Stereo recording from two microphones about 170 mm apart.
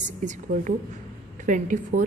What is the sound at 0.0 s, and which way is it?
A woman's voice, 50° right (ahead or behind).